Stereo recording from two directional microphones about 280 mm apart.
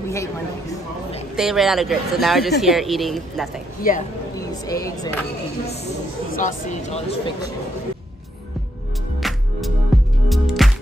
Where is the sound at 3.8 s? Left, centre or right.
Left.